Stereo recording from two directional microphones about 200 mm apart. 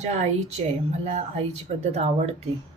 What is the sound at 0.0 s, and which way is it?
Speech, 35° right (ahead or behind).